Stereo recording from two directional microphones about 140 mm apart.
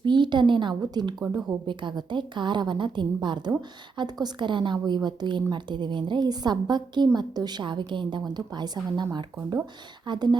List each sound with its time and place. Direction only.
0.0 s a woman's voice: 35° right (ahead or behind)
10.1 s a woman's voice: 30° right (ahead or behind)